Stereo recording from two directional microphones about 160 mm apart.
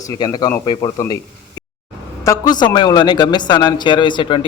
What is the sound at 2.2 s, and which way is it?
A man's voice, 25° left (ahead or behind).